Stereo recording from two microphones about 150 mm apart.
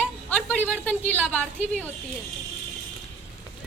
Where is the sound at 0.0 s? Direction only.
10° left (ahead or behind).